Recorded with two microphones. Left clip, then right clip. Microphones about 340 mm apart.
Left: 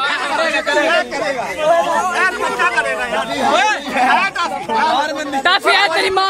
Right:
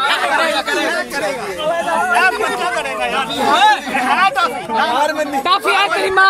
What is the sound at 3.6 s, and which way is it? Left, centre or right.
Chatter, centre.